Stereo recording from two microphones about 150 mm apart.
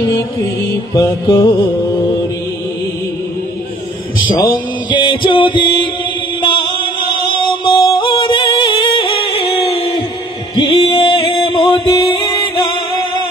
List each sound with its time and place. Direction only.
0.9 s music: 25° left (ahead or behind)
4.8 s music: 35° left (ahead or behind)